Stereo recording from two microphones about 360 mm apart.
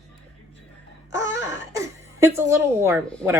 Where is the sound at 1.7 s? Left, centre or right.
Centre.